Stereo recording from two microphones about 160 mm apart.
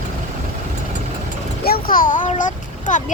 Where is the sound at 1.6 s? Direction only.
70° left (ahead or behind); by 3.0 s 50° left (ahead or behind).